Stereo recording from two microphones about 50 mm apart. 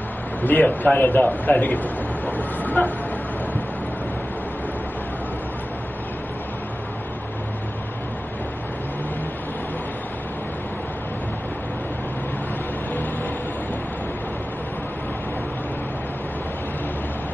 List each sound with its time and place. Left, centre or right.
0.4 s a man's voice: left